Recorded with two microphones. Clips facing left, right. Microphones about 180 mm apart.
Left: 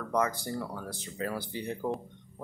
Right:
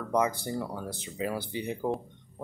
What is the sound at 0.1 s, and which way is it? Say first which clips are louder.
Speech: right 2 dB; 20° right (ahead or behind).